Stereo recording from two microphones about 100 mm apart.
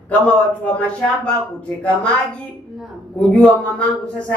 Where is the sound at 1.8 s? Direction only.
15° left (ahead or behind).